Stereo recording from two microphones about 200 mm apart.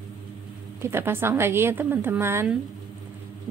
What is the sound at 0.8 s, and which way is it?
A woman's voice, 10° right (ahead or behind).